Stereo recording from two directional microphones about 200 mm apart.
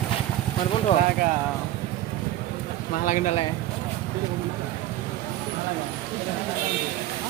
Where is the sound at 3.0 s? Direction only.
40° left (ahead or behind).